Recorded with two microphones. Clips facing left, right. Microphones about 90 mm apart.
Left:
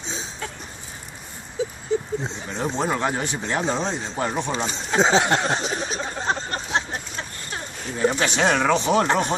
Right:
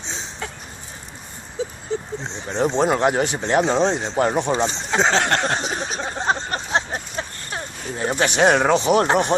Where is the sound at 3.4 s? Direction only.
30° right (ahead or behind).